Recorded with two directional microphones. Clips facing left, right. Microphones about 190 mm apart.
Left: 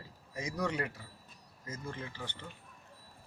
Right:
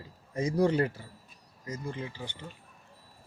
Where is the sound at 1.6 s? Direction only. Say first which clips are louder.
Right 5 dB; 15° right (ahead or behind).